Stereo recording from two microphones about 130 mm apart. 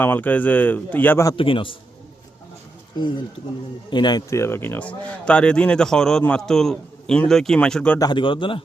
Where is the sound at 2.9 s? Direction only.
35° left (ahead or behind); by 8.0 s 10° left (ahead or behind).